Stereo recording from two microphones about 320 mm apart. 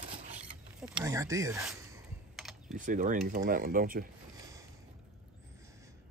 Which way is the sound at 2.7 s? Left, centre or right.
Right.